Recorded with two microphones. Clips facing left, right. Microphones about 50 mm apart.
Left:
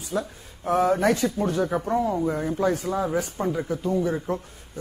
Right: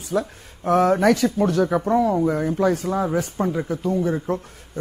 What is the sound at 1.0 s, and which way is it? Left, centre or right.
Speech, right.